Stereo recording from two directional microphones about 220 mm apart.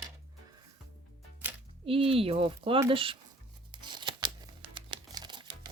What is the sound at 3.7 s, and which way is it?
Tearing, 20° right (ahead or behind).